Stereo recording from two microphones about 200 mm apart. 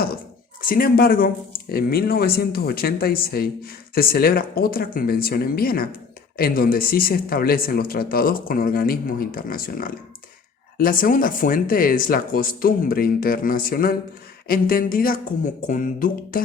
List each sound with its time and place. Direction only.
0.6 s speech: 45° left (ahead or behind)